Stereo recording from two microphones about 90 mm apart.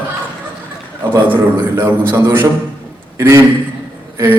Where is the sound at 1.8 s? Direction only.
25° right (ahead or behind).